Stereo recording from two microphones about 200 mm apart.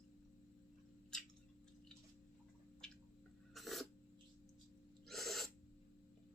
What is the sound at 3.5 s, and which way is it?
Filing, centre (ahead or behind).